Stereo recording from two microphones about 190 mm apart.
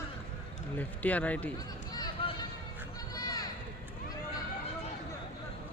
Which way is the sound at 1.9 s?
20° left (ahead or behind).